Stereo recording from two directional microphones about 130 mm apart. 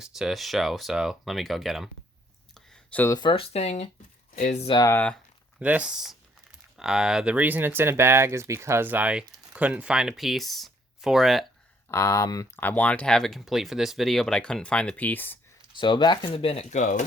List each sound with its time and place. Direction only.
0.0 s speech: centre (ahead or behind)
2.6 s a sound: 5° left (ahead or behind)
3.1 s speech: 35° left (ahead or behind); by 3.8 s 55° left (ahead or behind)
4.4 s speech: 80° left
4.9 s speech: 10° left (ahead or behind)
5.5 s speech: 10° right (ahead or behind)
11.9 s speech: 25° left (ahead or behind)
12.5 s speech: 15° left (ahead or behind)
15.7 s speech: 35° left (ahead or behind)
16.6 s speech: 75° left (ahead or behind)